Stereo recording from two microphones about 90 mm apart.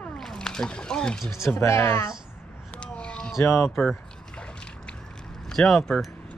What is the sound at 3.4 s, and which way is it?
Speech, 25° left (ahead or behind).